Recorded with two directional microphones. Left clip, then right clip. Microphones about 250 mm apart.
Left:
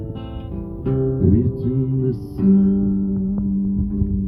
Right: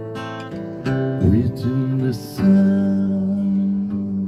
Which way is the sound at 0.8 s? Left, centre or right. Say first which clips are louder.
Left 1 dB; right.